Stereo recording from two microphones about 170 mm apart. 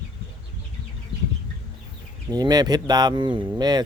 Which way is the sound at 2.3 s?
25° right (ahead or behind).